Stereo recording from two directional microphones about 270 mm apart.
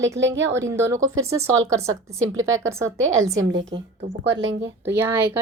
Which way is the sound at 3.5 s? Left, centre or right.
Right.